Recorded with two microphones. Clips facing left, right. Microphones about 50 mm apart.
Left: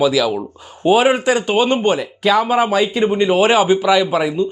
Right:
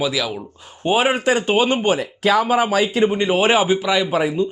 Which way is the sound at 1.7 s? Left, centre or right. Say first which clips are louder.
Left 2 dB; left.